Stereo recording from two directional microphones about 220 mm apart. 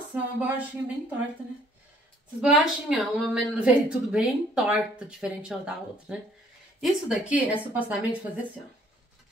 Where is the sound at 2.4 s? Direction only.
Centre (ahead or behind).